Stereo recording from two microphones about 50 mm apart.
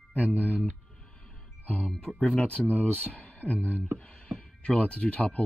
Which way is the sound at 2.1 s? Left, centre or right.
Left.